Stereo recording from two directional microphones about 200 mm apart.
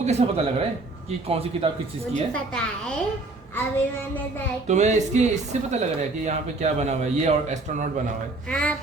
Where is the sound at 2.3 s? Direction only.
5° left (ahead or behind).